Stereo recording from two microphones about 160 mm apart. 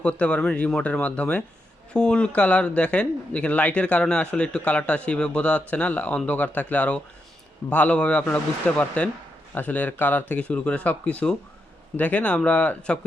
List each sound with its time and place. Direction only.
0.0 s a man's voice: 5° left (ahead or behind)